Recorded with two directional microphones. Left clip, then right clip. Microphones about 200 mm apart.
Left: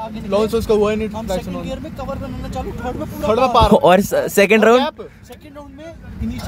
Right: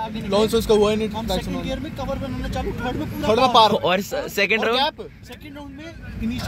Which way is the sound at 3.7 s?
45° left (ahead or behind).